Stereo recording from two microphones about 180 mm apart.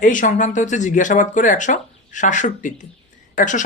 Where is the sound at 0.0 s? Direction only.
45° left (ahead or behind).